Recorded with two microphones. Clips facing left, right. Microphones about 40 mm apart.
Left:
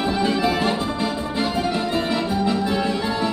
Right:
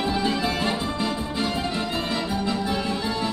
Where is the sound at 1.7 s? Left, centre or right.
Centre.